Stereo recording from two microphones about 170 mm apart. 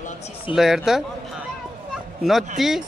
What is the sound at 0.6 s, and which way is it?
Speech, centre (ahead or behind).